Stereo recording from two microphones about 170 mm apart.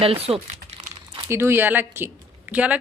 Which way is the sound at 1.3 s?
15° right (ahead or behind).